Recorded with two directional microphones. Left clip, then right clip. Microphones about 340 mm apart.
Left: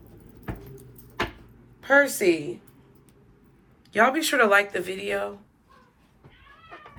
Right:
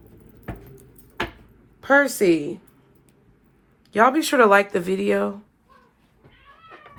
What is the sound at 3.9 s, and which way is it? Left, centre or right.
Speech, centre.